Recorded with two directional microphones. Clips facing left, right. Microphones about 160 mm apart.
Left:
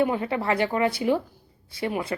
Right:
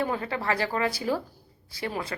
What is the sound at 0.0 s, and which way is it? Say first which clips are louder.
A woman's voice: left 5 dB; 25° left (ahead or behind).